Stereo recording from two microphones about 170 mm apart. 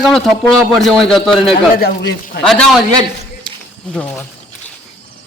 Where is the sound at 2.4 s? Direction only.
5° left (ahead or behind).